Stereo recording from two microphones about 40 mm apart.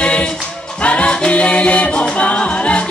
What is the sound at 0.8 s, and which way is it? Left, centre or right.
Music, left.